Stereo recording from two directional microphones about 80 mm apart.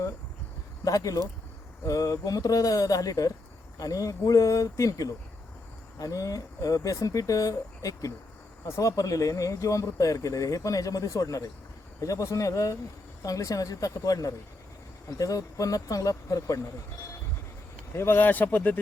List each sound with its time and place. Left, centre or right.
0.9 s speech: left
17.9 s speech: left